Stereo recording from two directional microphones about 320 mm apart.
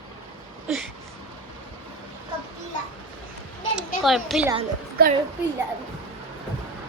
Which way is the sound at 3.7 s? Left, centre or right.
Centre.